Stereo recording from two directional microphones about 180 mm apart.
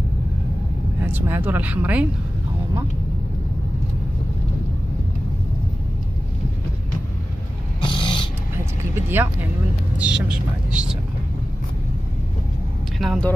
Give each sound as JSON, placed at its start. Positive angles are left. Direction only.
{"t": 1.0, "sound": "speech", "side_deg": -10}
{"t": 7.8, "sound": "a sound", "side_deg": 25}
{"t": 8.9, "sound": "speech", "side_deg": -10}
{"t": 13.0, "sound": "speech", "side_deg": 0}